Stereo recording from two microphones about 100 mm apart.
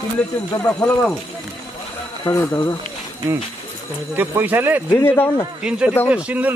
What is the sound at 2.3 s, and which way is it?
Speech, 30° left (ahead or behind).